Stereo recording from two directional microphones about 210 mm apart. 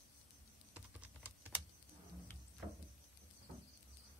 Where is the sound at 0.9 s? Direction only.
5° right (ahead or behind).